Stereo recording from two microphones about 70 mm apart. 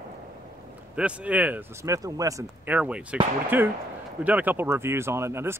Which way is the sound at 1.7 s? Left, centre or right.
Right.